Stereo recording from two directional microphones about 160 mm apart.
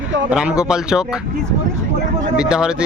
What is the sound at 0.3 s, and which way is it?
Speech, 5° right (ahead or behind).